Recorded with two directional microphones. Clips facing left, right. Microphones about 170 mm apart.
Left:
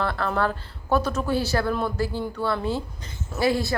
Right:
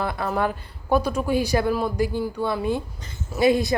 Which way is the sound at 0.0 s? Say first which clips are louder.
Even; 10° right (ahead or behind).